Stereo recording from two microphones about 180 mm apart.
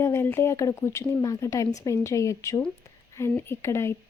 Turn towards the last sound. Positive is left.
turn(degrees=15)  # may be behind; listen again after turning